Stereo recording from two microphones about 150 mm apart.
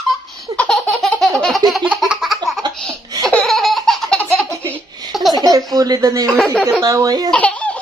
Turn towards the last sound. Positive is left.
turn(degrees=10)  # may be behind; listen again after turning